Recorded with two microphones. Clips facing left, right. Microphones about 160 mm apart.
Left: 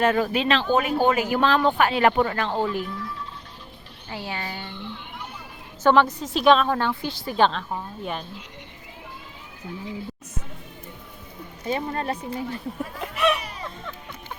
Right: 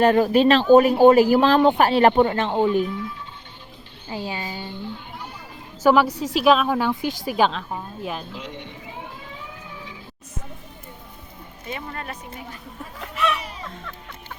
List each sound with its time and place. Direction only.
0.0 s speech: 35° right (ahead or behind); by 3.1 s 20° right (ahead or behind)
4.3 s a woman's voice: 15° right (ahead or behind)
5.8 s a woman's voice: 10° right (ahead or behind)
8.3 s speech: 90° right
11.6 s a woman's voice: 30° left (ahead or behind)
13.0 s a sound: 20° left (ahead or behind)